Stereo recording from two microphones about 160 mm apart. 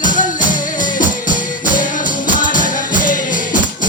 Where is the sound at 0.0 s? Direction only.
55° left (ahead or behind).